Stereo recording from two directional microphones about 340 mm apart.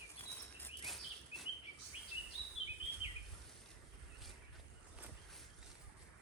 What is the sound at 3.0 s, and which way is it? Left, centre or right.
Bird vocalization, centre.